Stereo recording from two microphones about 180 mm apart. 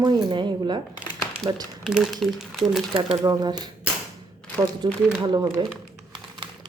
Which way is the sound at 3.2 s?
20° right (ahead or behind).